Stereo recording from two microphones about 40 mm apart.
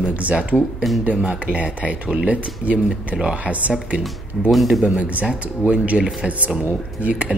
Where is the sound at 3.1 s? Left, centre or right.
Centre.